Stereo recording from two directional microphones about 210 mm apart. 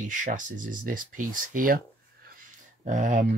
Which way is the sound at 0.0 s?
40° right (ahead or behind).